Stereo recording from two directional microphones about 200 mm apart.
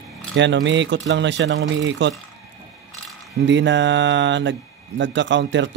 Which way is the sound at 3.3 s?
65° right (ahead or behind).